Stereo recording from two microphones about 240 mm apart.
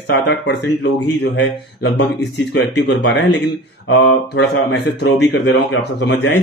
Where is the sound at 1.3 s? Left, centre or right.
Left.